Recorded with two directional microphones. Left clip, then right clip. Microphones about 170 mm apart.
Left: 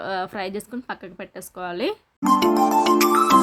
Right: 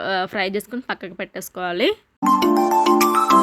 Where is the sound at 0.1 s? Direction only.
20° right (ahead or behind).